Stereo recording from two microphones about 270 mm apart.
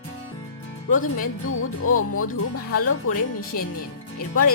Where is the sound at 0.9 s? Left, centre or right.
Left.